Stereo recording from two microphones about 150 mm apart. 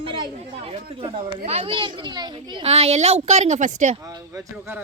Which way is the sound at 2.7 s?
45° right (ahead or behind).